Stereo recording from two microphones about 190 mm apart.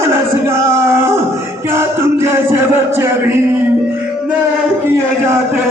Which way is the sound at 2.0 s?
15° right (ahead or behind).